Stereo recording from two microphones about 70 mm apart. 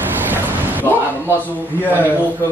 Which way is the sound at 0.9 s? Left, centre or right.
Left.